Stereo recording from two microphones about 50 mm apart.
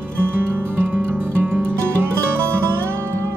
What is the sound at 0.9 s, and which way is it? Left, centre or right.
Music, right.